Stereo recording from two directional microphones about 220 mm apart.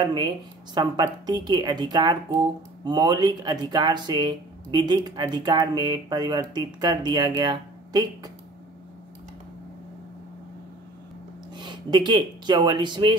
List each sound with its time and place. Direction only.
0.0 s speech: 20° right (ahead or behind)
11.5 s speech: 20° right (ahead or behind)